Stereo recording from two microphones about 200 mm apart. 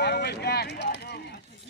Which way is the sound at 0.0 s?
55° left (ahead or behind).